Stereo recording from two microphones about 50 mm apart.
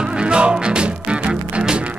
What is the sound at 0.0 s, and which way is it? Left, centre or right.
Music, centre.